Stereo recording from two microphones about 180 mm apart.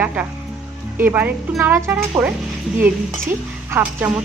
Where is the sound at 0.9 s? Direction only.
10° right (ahead or behind).